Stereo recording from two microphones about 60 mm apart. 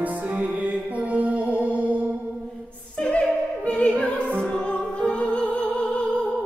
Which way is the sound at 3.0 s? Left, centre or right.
Left.